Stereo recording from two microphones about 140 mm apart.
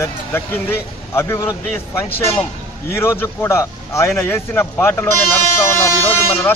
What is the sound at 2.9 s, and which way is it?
A man's voice, 20° left (ahead or behind).